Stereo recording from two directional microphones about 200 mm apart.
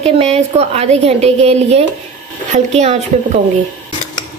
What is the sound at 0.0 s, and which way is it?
A woman's voice, 30° right (ahead or behind).